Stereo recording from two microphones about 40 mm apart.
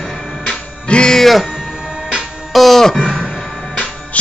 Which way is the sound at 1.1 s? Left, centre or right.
Centre.